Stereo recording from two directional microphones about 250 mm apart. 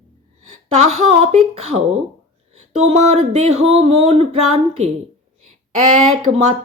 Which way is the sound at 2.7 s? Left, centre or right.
Right.